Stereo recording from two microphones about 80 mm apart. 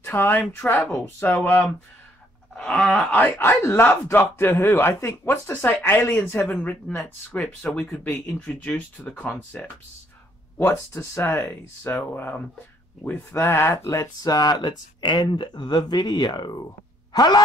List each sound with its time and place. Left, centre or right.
0.0 s speech: left; by 3.1 s centre
3.1 s speech: left
10.6 s speech: left
14.2 s speech: left
17.1 s a sound: left